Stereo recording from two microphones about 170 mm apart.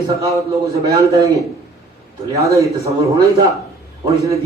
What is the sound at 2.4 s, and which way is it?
A man's voice, 20° right (ahead or behind).